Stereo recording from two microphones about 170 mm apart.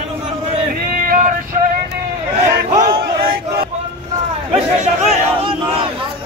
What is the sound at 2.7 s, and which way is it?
Battle cry, 60° right (ahead or behind).